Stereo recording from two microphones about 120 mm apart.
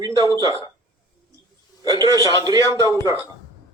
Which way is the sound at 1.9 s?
25° right (ahead or behind).